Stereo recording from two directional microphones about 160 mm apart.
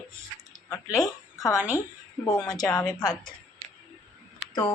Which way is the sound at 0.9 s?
20° left (ahead or behind).